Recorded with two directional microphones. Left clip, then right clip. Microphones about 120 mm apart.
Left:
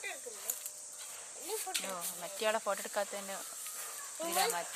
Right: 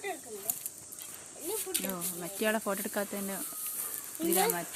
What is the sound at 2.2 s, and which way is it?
Speech, 5° right (ahead or behind).